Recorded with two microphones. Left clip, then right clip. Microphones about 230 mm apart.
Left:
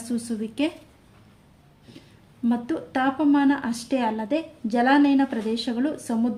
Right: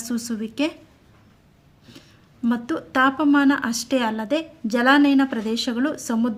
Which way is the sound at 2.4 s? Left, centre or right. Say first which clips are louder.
Right 1 dB; right.